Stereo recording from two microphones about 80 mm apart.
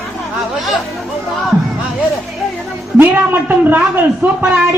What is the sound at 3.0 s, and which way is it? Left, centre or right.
A man's voice, right.